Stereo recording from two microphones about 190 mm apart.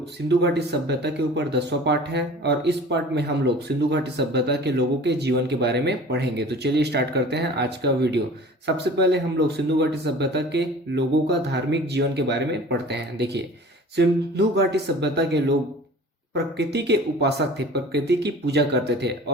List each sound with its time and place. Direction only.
0.3 s speech: 60° right (ahead or behind)